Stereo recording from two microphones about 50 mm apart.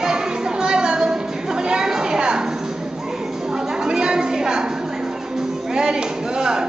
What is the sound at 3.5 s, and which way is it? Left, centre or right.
Chatter, centre.